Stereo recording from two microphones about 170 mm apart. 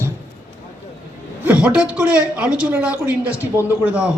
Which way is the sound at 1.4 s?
10° right (ahead or behind).